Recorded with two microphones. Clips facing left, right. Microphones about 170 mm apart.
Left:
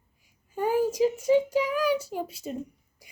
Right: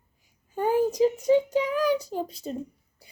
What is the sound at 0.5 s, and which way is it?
A child's voice, 10° left (ahead or behind).